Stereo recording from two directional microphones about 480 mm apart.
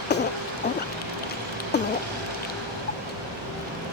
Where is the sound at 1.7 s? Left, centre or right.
Left.